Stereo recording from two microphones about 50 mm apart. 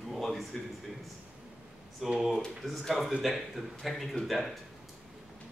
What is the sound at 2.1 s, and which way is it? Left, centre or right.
Speech, centre.